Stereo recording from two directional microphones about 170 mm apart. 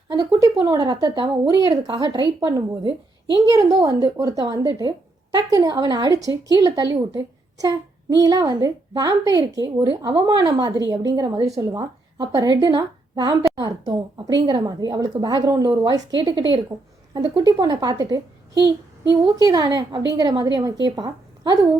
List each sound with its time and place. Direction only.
0.2 s speech: 20° right (ahead or behind)
8.2 s speech: 20° right (ahead or behind)
18.5 s child singing: 90° right
19.2 s speech: 20° right (ahead or behind)